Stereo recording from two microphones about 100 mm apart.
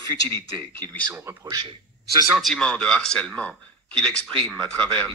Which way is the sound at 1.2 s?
30° right (ahead or behind).